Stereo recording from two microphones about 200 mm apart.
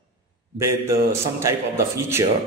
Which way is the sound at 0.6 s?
15° right (ahead or behind).